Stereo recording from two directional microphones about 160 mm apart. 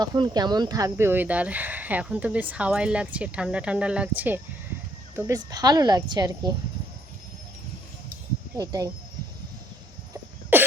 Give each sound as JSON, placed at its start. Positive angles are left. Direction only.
{"t": 0.0, "sound": "a woman's voice", "side_deg": -25}
{"t": 8.5, "sound": "a woman's voice", "side_deg": -20}
{"t": 10.5, "sound": "cough", "side_deg": -15}